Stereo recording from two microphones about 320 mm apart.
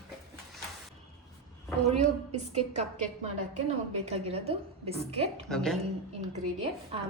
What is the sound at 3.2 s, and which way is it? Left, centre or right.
A woman's voice, centre.